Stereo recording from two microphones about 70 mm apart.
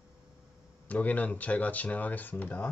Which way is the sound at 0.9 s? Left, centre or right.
Left.